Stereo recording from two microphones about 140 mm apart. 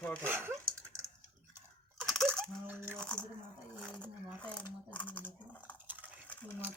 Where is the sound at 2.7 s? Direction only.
15° right (ahead or behind).